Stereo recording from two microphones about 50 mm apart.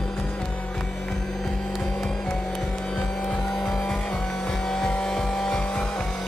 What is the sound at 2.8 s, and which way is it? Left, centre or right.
Vehicle, centre.